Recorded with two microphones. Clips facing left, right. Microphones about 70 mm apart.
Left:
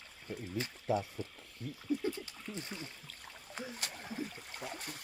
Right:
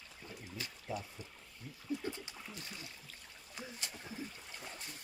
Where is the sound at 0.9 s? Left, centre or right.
Left.